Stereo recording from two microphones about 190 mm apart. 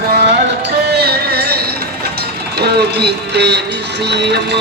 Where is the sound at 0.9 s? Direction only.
60° right (ahead or behind).